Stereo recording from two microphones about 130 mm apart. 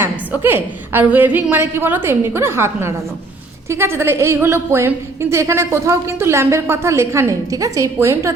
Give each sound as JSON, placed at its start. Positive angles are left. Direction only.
{"t": 0.0, "sound": "a woman's voice", "side_deg": -15}